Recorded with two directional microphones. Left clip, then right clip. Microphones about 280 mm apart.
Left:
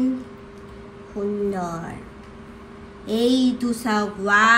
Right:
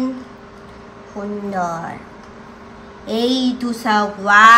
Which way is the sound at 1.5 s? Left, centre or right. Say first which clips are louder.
Right 7 dB; right.